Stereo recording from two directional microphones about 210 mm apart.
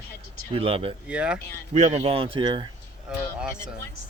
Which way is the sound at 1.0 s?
5° right (ahead or behind).